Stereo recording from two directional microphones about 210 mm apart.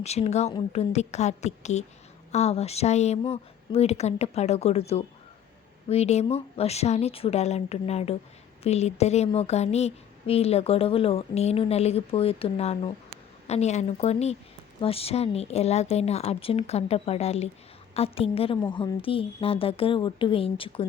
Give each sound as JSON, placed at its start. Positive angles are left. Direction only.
{"t": 0.0, "sound": "a woman's voice", "side_deg": 30}